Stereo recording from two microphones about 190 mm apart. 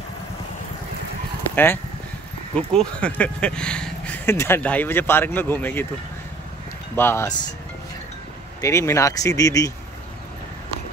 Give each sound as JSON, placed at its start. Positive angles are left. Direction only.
{"t": 1.5, "sound": "speech", "side_deg": 10}
{"t": 7.0, "sound": "speech", "side_deg": 15}
{"t": 8.5, "sound": "speech", "side_deg": 15}